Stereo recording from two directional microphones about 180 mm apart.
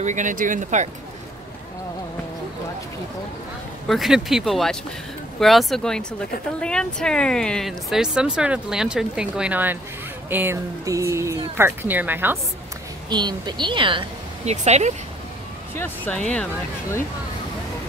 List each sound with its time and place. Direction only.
0.0 s speech: 45° right (ahead or behind)
3.9 s speech: centre (ahead or behind)
13.1 s speech: 25° right (ahead or behind); by 15.0 s 40° right (ahead or behind)
15.7 s speech: 10° left (ahead or behind)